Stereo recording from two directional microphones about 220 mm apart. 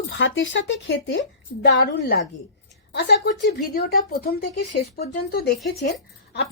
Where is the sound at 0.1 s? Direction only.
60° left (ahead or behind).